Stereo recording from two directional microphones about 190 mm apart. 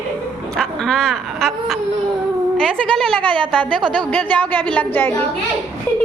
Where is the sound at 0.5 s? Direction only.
5° left (ahead or behind).